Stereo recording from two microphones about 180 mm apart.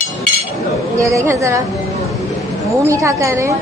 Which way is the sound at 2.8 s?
15° right (ahead or behind).